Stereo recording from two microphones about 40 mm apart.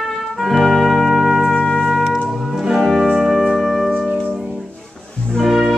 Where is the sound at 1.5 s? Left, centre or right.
Centre.